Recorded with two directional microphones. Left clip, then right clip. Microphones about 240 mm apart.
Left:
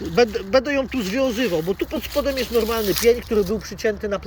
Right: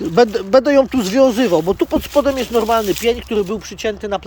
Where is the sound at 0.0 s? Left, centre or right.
Right.